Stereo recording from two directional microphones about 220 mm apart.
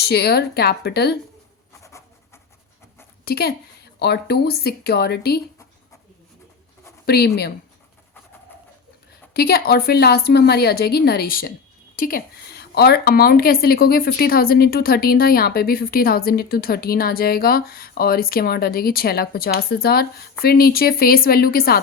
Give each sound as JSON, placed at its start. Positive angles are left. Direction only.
{"t": 0.0, "sound": "a woman's voice", "side_deg": 45}
{"t": 1.8, "sound": "a sound", "side_deg": 15}
{"t": 3.2, "sound": "a woman's voice", "side_deg": 45}
{"t": 7.0, "sound": "a woman's voice", "side_deg": 45}
{"t": 9.3, "sound": "a woman's voice", "side_deg": 45}